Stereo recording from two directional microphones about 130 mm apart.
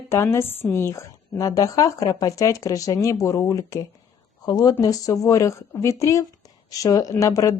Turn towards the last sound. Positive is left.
turn(degrees=25)  # may be behind; listen again after turning